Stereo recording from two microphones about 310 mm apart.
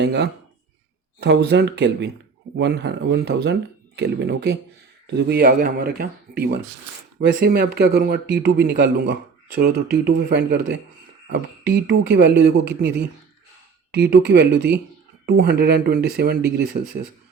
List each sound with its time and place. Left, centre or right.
0.0 s speech: right